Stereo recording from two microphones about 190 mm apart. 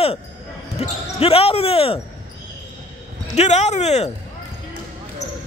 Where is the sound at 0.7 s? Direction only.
30° left (ahead or behind).